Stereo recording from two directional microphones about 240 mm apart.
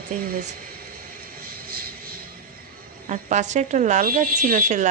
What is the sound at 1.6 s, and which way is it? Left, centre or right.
Vehicle, right.